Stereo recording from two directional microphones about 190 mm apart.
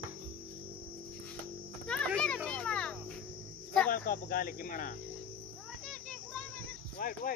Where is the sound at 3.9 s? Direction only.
45° left (ahead or behind).